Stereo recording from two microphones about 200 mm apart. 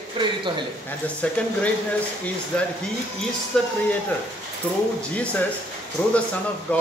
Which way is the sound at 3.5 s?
5° left (ahead or behind).